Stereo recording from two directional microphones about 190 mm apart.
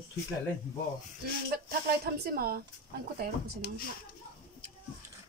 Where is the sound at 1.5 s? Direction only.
55° right (ahead or behind).